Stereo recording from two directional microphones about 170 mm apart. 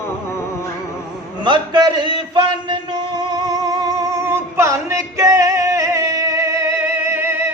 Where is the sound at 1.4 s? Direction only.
25° right (ahead or behind).